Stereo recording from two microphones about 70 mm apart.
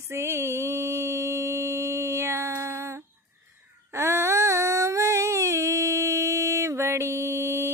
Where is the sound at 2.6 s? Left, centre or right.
Right.